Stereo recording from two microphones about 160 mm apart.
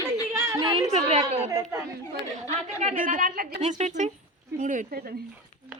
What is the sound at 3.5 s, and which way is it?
A woman's voice, 45° right (ahead or behind).